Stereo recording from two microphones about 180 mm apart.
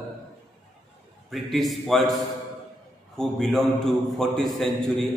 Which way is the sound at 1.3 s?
Centre (ahead or behind).